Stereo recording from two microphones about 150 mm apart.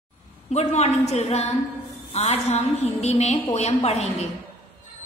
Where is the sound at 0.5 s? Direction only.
45° left (ahead or behind).